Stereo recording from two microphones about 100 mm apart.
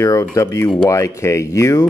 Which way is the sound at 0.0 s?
30° left (ahead or behind).